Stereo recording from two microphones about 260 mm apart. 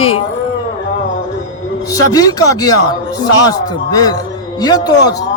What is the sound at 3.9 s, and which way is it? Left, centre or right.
Speech, centre.